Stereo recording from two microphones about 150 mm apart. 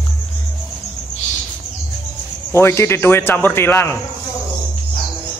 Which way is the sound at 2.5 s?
20° left (ahead or behind).